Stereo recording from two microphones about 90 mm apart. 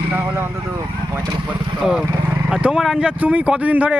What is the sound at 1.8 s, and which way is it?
Speech, 5° right (ahead or behind).